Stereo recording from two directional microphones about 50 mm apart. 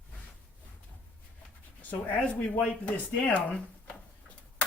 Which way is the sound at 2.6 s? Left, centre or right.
Left.